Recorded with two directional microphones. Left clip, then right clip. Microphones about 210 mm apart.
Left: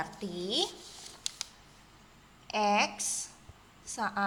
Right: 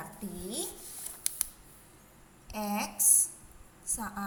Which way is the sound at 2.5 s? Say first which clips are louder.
Left 8 dB; 45° left (ahead or behind).